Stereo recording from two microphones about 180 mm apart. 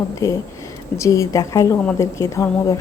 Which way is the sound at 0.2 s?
15° left (ahead or behind).